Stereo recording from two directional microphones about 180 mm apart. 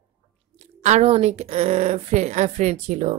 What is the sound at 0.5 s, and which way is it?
Speech, 40° right (ahead or behind).